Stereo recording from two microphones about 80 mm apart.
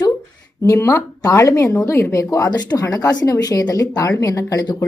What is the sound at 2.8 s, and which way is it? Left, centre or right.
A woman's voice, left.